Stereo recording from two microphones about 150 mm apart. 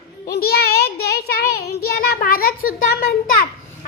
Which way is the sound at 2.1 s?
80° left.